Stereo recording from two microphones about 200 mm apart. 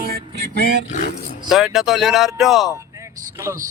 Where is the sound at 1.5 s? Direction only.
Centre (ahead or behind).